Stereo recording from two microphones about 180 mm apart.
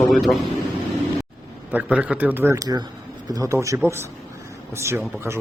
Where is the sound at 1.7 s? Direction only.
5° right (ahead or behind).